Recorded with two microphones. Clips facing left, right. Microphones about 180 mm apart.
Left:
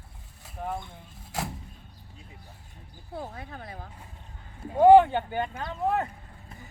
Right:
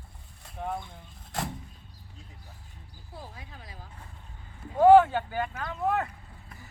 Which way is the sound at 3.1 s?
55° left (ahead or behind).